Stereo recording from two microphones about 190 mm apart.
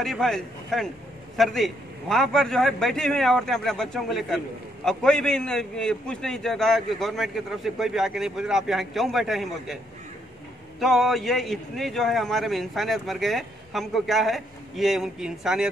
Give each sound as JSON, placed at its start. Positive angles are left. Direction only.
{"t": 0.0, "sound": "a man's voice", "side_deg": 0}
{"t": 10.8, "sound": "a man's voice", "side_deg": 0}